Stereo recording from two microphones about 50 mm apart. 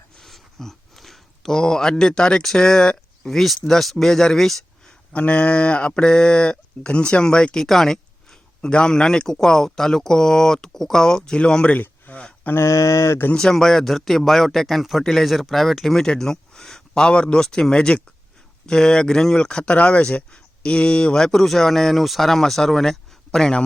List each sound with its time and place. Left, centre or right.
0.2 s a sound: centre
3.3 s speech: centre
5.1 s speech: left
11.7 s a sound: left
12.5 s speech: left
13.3 s speech: centre